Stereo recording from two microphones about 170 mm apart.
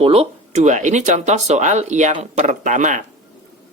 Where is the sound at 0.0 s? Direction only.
35° right (ahead or behind).